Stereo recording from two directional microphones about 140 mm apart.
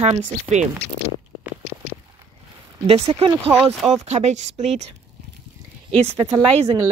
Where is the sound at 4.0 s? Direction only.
55° right (ahead or behind).